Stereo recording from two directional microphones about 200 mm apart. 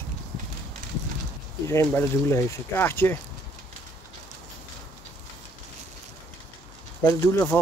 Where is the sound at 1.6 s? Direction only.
15° left (ahead or behind).